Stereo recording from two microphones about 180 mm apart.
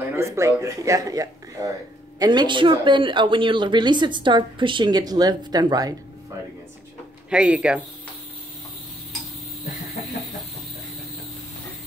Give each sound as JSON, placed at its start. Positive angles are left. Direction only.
{"t": 0.1, "sound": "speech", "side_deg": -15}
{"t": 7.2, "sound": "speech", "side_deg": -5}